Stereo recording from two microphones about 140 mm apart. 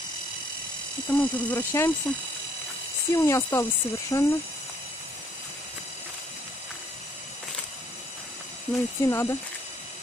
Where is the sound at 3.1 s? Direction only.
20° left (ahead or behind).